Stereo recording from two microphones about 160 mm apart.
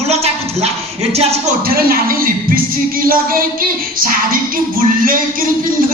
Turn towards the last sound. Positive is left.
turn(degrees=-60)  # may be behind; listen again after turning